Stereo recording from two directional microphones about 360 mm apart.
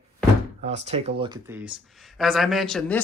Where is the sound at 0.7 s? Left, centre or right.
Centre.